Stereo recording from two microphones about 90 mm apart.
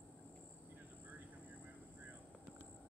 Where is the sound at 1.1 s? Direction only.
20° right (ahead or behind).